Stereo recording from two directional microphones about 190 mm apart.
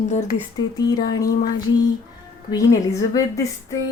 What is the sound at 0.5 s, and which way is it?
Speech, 20° left (ahead or behind).